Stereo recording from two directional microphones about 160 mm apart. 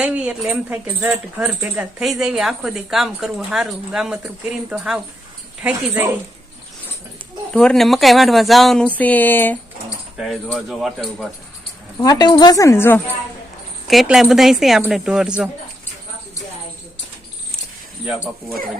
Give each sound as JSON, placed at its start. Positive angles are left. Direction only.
{"t": 0.0, "sound": "speech", "side_deg": -10}
{"t": 7.5, "sound": "speech", "side_deg": 5}
{"t": 10.2, "sound": "speech", "side_deg": 0}
{"t": 12.0, "sound": "a woman's voice", "side_deg": 25}
{"t": 13.8, "sound": "speech", "side_deg": 0}